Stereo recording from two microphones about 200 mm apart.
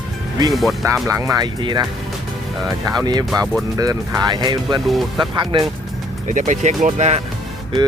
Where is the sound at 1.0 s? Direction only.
15° right (ahead or behind).